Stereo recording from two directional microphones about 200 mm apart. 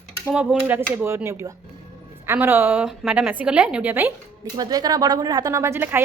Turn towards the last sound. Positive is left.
turn(degrees=-10)  # may be behind; listen again after turning